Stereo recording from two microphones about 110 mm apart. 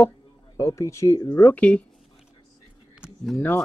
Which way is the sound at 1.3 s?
15° left (ahead or behind).